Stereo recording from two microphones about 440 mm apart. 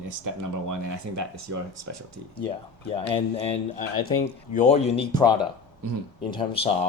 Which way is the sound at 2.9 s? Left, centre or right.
Centre.